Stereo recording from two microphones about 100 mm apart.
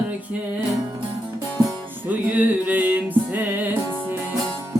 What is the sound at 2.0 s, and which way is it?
Music, 15° right (ahead or behind).